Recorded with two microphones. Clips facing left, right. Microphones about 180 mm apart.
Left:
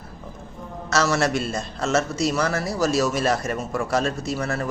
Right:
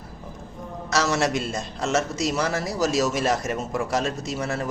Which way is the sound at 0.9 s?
15° right (ahead or behind).